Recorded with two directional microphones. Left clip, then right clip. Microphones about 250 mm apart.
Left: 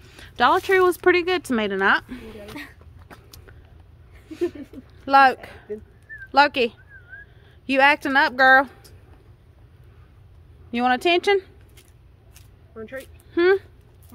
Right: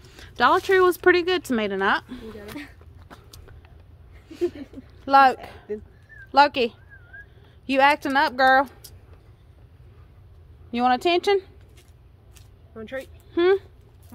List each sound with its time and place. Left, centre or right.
0.0 s speech: centre
3.1 s a sound: centre
5.0 s speech: centre
10.7 s speech: centre
12.7 s speech: right
13.3 s speech: centre